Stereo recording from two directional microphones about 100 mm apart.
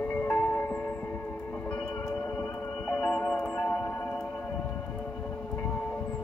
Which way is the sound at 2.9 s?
10° left (ahead or behind).